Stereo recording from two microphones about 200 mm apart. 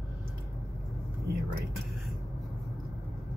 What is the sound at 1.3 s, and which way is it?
Speech, 55° right (ahead or behind).